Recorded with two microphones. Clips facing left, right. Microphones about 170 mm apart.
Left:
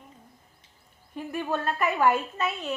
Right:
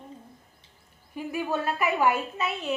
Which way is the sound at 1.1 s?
10° right (ahead or behind).